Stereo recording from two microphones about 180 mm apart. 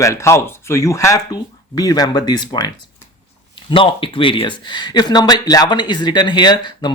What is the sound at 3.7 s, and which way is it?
Speech, 30° left (ahead or behind).